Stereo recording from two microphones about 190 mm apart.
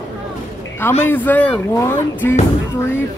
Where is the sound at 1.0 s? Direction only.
10° left (ahead or behind).